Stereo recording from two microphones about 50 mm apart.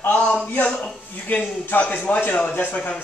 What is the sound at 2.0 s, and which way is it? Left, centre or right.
Speech, left.